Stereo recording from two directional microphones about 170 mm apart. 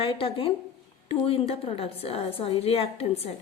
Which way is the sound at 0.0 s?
35° left (ahead or behind).